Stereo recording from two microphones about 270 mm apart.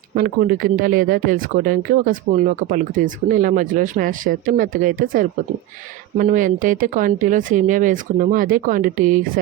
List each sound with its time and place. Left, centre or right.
0.1 s speech: right
6.1 s speech: right